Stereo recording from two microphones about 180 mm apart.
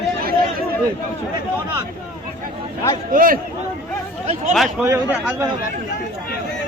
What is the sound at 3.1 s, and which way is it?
Speech, 50° right (ahead or behind).